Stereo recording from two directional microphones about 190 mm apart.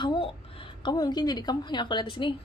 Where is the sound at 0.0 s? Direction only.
25° left (ahead or behind).